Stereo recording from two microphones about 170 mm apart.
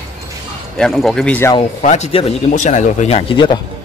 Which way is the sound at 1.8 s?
40° left (ahead or behind).